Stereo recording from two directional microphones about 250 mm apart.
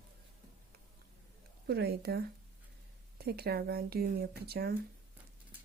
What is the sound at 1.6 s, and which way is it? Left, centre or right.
Speech, right.